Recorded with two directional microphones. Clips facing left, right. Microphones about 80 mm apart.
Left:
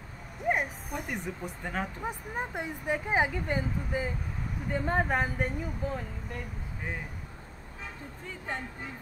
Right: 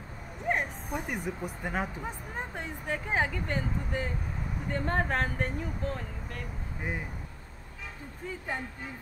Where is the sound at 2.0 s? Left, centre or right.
Centre.